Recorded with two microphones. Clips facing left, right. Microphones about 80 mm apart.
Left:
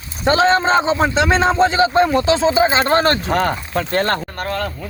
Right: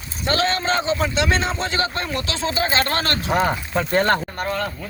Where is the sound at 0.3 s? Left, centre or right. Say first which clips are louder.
Left 7 dB; left.